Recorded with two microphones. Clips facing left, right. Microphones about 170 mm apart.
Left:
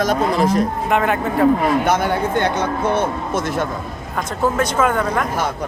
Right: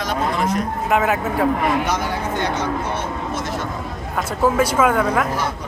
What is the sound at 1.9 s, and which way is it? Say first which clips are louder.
Speech: left 5 dB; 55° left (ahead or behind).